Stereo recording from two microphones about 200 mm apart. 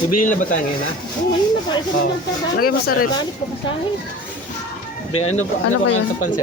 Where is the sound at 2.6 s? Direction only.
50° left (ahead or behind).